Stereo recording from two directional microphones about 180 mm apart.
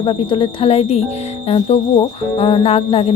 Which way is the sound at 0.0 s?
30° left (ahead or behind).